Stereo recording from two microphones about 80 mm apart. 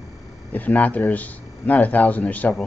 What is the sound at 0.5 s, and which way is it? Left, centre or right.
Speech, centre.